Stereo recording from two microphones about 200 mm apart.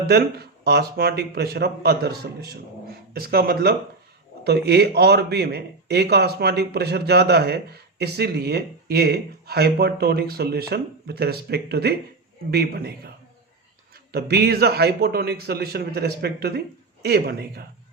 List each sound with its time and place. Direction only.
0.1 s speech: 55° right (ahead or behind)
14.1 s speech: 55° right (ahead or behind)